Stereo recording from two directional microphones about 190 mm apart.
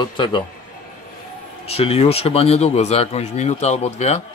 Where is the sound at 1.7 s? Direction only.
30° left (ahead or behind).